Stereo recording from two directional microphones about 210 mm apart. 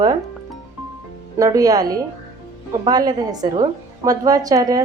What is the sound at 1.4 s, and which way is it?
A woman's voice, 15° right (ahead or behind).